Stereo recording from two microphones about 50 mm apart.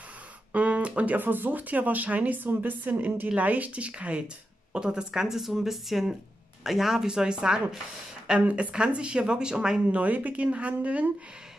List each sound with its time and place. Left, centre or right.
0.5 s speech: right
4.7 s speech: centre